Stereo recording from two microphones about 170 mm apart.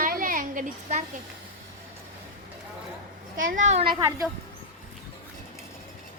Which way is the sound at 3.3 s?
50° right (ahead or behind).